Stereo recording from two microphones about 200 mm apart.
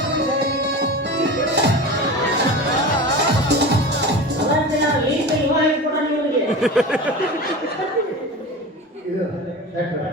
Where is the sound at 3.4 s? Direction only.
55° right (ahead or behind).